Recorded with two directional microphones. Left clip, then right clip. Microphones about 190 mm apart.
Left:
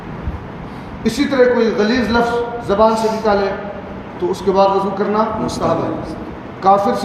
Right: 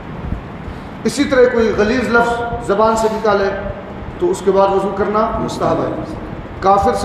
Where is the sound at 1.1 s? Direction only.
40° right (ahead or behind).